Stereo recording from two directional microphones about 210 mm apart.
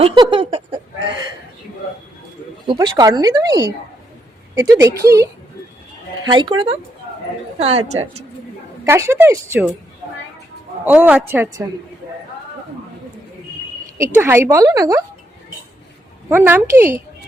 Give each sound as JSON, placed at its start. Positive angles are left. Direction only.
{"t": 0.0, "sound": "a sound", "side_deg": -25}
{"t": 2.6, "sound": "a woman's voice", "side_deg": -20}
{"t": 6.3, "sound": "speech", "side_deg": -25}
{"t": 8.8, "sound": "a woman's voice", "side_deg": -15}
{"t": 10.8, "sound": "a woman's voice", "side_deg": -5}
{"t": 14.0, "sound": "a woman's voice", "side_deg": -10}
{"t": 16.3, "sound": "a woman's voice", "side_deg": -10}